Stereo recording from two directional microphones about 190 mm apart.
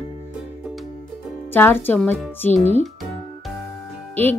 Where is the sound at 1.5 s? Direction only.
10° left (ahead or behind).